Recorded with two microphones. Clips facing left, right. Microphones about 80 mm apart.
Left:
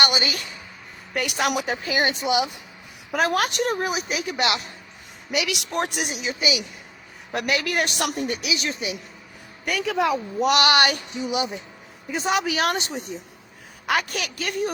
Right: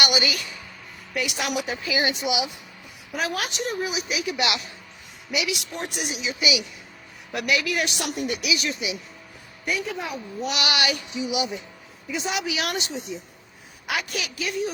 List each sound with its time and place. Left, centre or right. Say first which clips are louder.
0.0 s speech: left 1 dB; left
1.1 s a woman's voice: left 3 dB; left
5.3 s a woman's voice: left 2 dB; left
6.4 s a woman's voice: right 1 dB; left
8.2 s speech: even; left
9.6 s a woman's voice: left 6 dB; left
12.9 s speech: left 1 dB; left
13.8 s a woman's voice: left 4 dB; left